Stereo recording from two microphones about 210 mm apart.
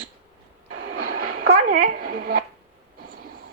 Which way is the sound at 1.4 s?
40° right (ahead or behind).